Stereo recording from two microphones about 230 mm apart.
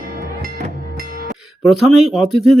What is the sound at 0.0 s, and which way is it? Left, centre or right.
Music, right.